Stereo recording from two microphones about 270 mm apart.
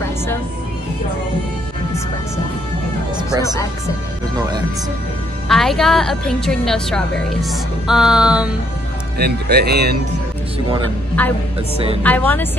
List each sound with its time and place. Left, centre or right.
5.5 s a woman's voice: centre
9.2 s speech: right
11.2 s speech: centre